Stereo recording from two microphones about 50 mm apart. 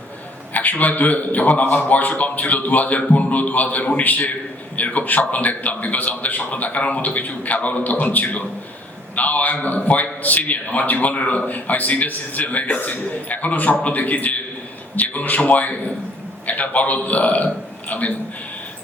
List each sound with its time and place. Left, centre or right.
0.5 s a man's voice: left